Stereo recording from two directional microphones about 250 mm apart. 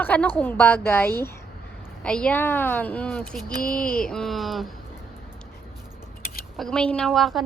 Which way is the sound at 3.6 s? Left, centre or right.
Left.